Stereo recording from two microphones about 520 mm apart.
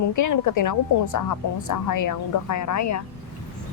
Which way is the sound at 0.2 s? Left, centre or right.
Left.